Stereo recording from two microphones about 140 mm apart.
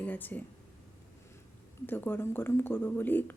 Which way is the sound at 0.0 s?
15° left (ahead or behind).